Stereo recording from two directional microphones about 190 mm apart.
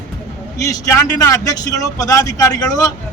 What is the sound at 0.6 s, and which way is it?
Speech, 15° left (ahead or behind).